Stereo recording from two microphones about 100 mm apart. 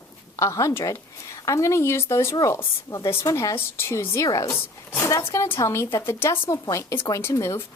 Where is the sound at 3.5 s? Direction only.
25° left (ahead or behind).